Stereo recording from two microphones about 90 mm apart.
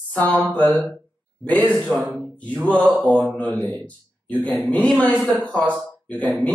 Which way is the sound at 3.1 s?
15° left (ahead or behind).